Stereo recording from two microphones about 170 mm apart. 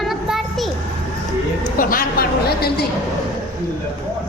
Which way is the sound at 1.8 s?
55° left (ahead or behind).